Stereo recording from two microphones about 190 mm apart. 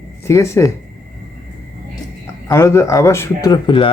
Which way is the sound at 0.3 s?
15° left (ahead or behind).